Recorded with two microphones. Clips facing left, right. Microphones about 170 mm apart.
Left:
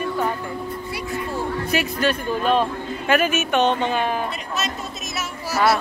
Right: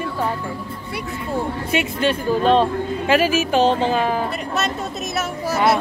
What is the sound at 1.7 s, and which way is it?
Speech, 25° right (ahead or behind).